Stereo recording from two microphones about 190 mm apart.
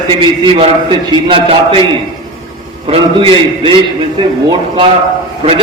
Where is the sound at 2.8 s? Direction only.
30° right (ahead or behind).